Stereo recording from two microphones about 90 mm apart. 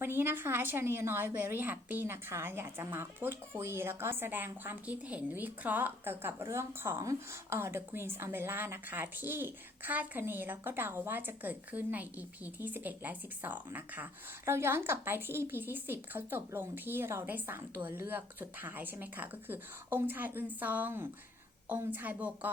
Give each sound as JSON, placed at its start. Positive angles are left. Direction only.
{"t": 0.0, "sound": "a woman's voice", "side_deg": -25}